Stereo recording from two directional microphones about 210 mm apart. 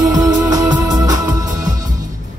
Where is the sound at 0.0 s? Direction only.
15° right (ahead or behind).